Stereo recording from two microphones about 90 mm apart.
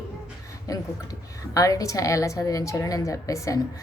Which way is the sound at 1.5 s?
40° left (ahead or behind).